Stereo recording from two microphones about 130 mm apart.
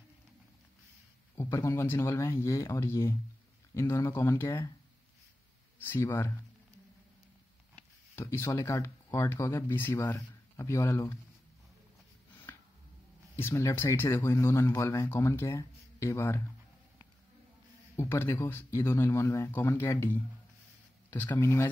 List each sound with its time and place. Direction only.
1.3 s speech: 20° left (ahead or behind)
5.8 s speech: 15° left (ahead or behind)
7.7 s a sound: 20° left (ahead or behind)
8.5 s speech: 25° left (ahead or behind)
13.4 s speech: 20° left (ahead or behind)
17.9 s speech: 20° left (ahead or behind)